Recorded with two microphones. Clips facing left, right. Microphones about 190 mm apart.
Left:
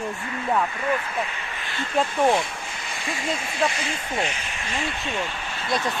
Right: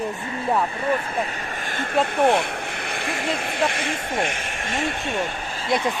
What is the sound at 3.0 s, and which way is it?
Speech, 60° right (ahead or behind).